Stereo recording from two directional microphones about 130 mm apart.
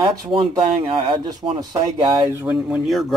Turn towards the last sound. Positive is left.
turn(degrees=0)  # may be behind; listen again after turning